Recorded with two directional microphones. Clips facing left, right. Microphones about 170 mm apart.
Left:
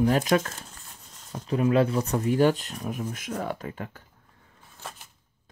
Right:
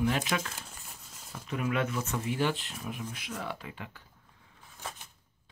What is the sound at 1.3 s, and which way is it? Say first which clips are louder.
Speech: left 9 dB; 35° left (ahead or behind).